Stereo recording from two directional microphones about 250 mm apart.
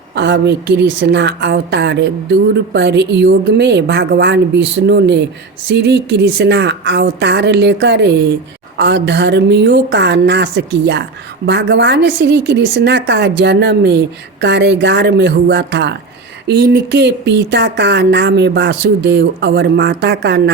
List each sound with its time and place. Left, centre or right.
0.1 s speech: right